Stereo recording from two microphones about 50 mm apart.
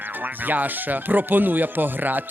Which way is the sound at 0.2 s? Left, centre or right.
Right.